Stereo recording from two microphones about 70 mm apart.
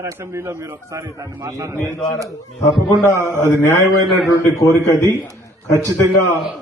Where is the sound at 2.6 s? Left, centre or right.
Left.